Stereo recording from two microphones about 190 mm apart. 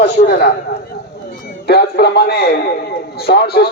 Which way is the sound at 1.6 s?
55° left (ahead or behind).